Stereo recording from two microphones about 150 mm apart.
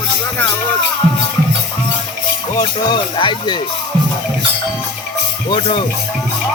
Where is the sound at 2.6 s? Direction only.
30° left (ahead or behind).